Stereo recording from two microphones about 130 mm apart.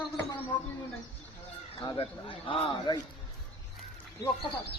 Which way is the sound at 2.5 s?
45° left (ahead or behind).